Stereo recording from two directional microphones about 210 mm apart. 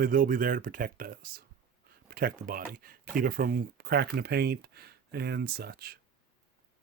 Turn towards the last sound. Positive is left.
turn(degrees=-50)  # may be behind; listen again after turning